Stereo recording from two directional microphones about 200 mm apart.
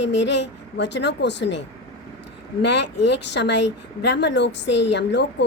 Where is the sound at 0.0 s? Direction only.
60° left (ahead or behind).